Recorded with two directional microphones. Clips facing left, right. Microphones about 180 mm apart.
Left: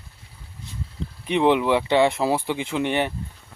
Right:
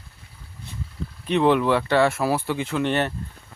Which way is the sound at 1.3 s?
15° left (ahead or behind).